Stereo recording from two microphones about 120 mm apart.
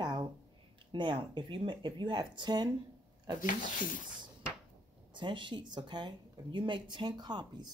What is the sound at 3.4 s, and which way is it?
Speech, 90° left.